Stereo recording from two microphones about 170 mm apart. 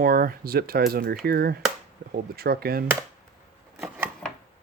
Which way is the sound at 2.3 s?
65° right (ahead or behind).